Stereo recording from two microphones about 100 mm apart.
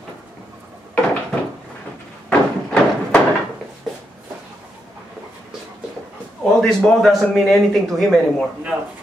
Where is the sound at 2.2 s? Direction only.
10° left (ahead or behind).